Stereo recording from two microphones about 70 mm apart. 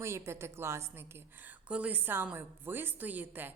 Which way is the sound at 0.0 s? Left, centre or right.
Right.